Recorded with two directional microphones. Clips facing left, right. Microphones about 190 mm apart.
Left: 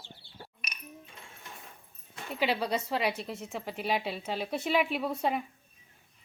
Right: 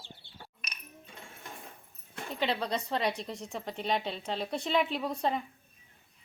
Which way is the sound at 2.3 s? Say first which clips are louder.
Left 2 dB; 10° left (ahead or behind).